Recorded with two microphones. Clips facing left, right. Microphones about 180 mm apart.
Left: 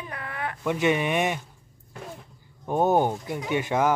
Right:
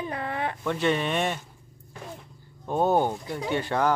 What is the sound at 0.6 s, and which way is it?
Speech, 10° left (ahead or behind).